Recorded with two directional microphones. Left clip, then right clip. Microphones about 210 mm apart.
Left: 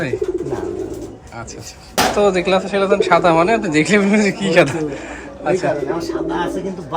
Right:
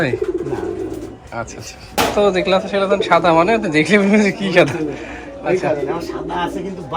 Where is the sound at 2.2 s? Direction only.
10° left (ahead or behind).